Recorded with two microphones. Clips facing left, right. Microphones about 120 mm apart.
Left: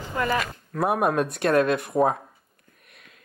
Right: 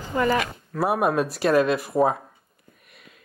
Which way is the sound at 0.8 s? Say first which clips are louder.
Right 1 dB; centre (ahead or behind).